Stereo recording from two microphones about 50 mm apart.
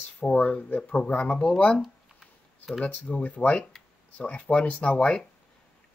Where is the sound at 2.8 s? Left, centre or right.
Left.